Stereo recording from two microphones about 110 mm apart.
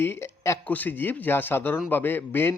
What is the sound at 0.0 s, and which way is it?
A man's voice, 20° left (ahead or behind).